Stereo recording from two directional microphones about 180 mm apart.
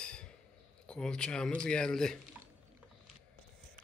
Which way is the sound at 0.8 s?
5° left (ahead or behind).